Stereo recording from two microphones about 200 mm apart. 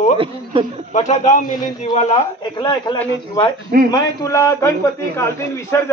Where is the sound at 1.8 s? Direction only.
25° left (ahead or behind).